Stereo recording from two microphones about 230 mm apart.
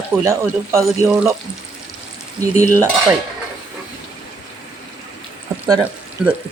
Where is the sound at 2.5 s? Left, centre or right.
Left.